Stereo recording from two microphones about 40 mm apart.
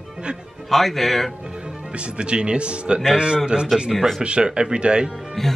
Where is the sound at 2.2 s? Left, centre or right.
Right.